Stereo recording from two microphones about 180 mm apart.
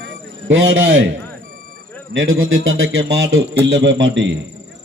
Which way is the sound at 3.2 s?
70° right (ahead or behind).